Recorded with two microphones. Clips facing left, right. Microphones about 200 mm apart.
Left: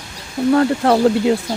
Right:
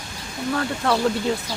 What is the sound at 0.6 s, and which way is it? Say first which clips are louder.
Speech: left 6 dB; 40° left (ahead or behind).